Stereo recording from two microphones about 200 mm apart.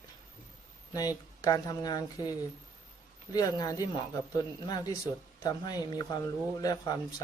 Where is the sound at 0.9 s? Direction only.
20° left (ahead or behind).